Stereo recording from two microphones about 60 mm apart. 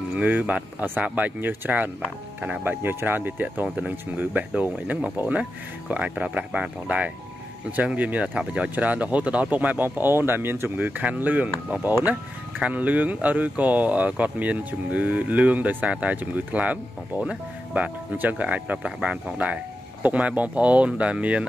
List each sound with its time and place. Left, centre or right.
0.1 s speech: right
10.9 s speech: right